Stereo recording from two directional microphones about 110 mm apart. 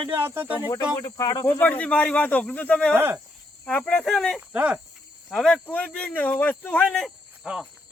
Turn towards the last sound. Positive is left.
turn(degrees=-5)  # may be behind; listen again after turning